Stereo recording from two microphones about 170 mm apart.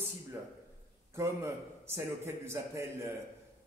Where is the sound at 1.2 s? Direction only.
15° right (ahead or behind).